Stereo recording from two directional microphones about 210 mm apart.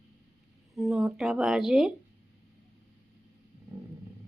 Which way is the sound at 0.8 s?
Centre (ahead or behind).